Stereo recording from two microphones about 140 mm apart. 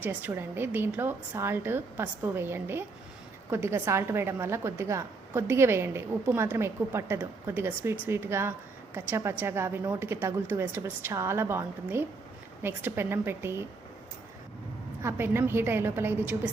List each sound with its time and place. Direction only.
0.0 s a woman's voice: 15° right (ahead or behind)
15.0 s a woman's voice: 15° right (ahead or behind)